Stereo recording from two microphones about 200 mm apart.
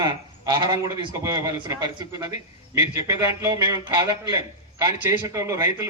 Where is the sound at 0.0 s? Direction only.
20° right (ahead or behind).